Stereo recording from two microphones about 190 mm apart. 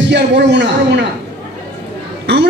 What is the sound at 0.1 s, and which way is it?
Speech, 65° right (ahead or behind).